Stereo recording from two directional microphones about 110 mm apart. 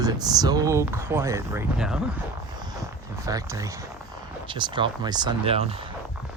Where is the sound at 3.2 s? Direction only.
30° right (ahead or behind).